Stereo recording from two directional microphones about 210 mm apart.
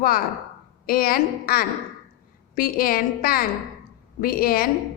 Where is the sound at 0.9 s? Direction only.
45° left (ahead or behind).